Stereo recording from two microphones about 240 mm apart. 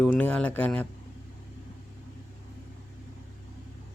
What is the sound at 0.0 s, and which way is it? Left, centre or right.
Speech, centre.